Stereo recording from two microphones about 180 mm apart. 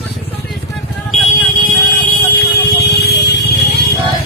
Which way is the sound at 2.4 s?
65° left (ahead or behind).